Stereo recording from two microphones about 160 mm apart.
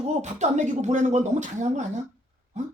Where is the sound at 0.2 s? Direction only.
45° right (ahead or behind).